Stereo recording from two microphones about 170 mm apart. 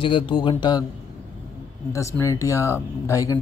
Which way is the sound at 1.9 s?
15° left (ahead or behind).